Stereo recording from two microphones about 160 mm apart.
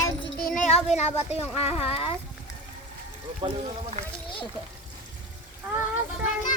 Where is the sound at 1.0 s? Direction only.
40° left (ahead or behind).